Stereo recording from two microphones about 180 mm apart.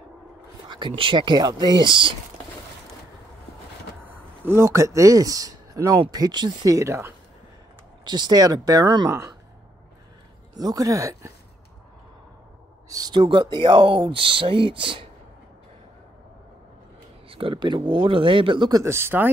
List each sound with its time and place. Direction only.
0.7 s speech: 25° right (ahead or behind)
4.0 s a man's voice: 10° right (ahead or behind)
10.6 s speech: 20° right (ahead or behind)
12.9 s speech: 25° right (ahead or behind)
17.3 s speech: 30° right (ahead or behind); by 19.2 s 15° right (ahead or behind)